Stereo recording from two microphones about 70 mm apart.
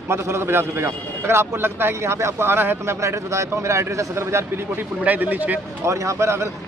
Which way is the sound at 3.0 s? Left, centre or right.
Right.